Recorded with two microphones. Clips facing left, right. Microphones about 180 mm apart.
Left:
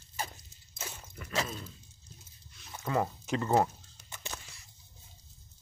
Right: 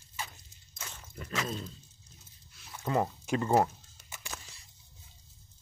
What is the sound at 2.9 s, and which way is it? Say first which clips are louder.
Speech: right 1 dB; 25° right (ahead or behind).